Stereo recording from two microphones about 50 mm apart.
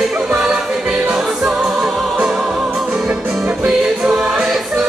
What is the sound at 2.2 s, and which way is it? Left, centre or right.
Music, centre.